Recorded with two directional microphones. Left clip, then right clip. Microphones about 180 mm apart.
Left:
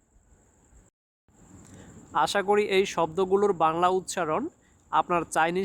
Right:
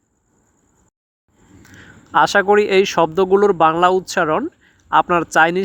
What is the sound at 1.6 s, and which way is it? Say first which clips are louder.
Speech: right 9 dB; 30° right (ahead or behind).